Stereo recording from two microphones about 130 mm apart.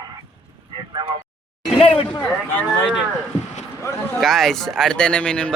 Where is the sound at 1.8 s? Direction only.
50° left (ahead or behind).